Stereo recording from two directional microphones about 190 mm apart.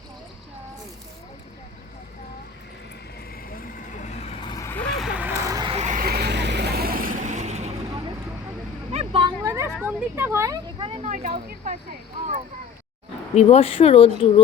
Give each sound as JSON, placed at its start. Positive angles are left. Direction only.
{"t": 4.4, "sound": "vehicle", "side_deg": 15}
{"t": 5.5, "sound": "a sound", "side_deg": -20}
{"t": 5.7, "sound": "vehicle", "side_deg": -40}
{"t": 8.9, "sound": "vehicle", "side_deg": -30}
{"t": 9.4, "sound": "a sound", "side_deg": -15}
{"t": 9.7, "sound": "vehicle", "side_deg": -10}
{"t": 11.3, "sound": "speech", "side_deg": -40}
{"t": 13.3, "sound": "speech", "side_deg": 30}